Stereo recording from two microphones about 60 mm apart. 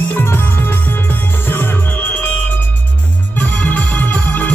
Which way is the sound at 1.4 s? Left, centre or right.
Left.